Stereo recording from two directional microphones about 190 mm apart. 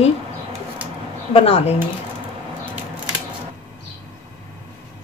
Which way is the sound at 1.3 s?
30° left (ahead or behind).